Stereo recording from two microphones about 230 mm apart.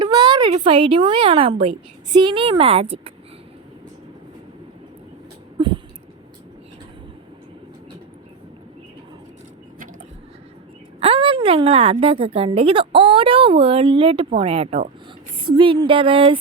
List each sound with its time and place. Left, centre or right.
0.0 s a woman's voice: centre
5.5 s a sound: right
11.0 s a woman's voice: right